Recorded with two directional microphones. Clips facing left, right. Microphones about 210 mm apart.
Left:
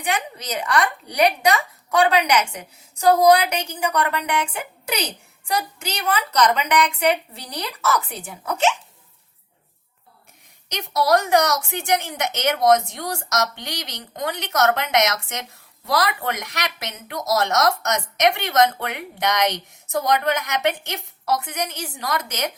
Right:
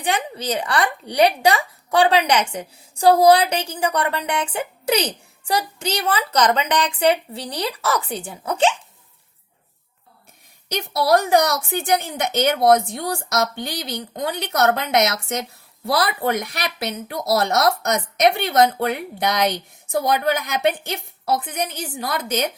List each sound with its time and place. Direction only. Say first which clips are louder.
0.0 s speech: right 3 dB; 30° right (ahead or behind)
10.8 s speech: right 1 dB; 30° right (ahead or behind)